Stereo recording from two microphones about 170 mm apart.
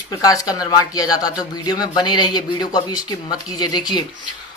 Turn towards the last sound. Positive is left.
turn(degrees=25)  # may be behind; listen again after turning